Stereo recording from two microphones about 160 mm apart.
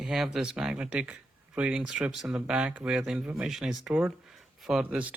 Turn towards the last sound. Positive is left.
turn(degrees=-10)  # may be behind; listen again after turning